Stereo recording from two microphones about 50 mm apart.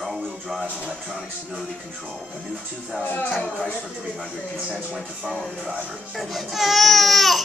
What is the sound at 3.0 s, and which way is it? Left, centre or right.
Speech, left.